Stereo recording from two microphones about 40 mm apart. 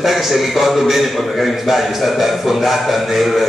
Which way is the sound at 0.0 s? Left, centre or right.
Centre.